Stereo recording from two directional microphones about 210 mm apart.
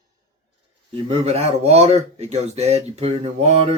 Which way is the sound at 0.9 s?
30° right (ahead or behind).